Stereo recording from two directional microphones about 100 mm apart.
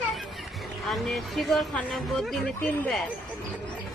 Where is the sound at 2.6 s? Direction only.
15° left (ahead or behind).